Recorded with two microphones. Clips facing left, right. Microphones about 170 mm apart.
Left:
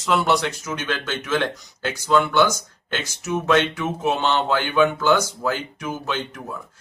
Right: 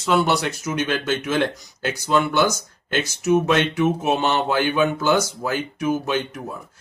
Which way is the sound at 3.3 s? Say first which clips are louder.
Right 1 dB; 15° right (ahead or behind).